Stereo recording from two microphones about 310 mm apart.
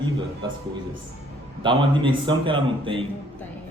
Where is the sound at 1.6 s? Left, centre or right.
Centre.